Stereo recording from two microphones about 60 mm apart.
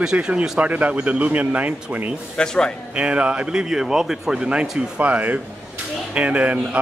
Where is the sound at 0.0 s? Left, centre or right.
Centre.